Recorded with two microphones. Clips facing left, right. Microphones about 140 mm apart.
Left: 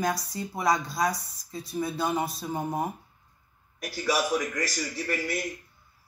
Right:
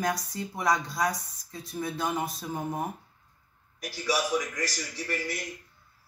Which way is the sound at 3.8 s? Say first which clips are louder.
Left 2 dB; 55° left (ahead or behind).